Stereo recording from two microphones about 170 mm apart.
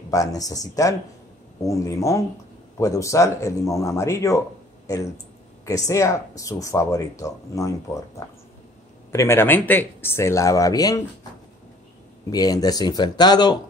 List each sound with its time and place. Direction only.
0.1 s speech: 20° left (ahead or behind)
9.1 s speech: 15° left (ahead or behind)
12.3 s speech: 20° left (ahead or behind)